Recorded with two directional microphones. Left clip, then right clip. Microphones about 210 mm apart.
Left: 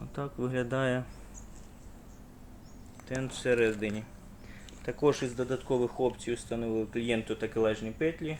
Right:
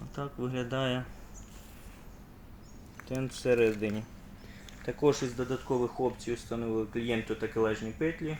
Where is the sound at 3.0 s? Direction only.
10° right (ahead or behind).